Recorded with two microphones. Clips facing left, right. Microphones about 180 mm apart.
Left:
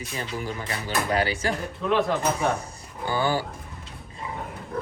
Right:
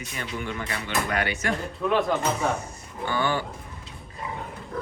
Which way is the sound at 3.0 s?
35° left (ahead or behind).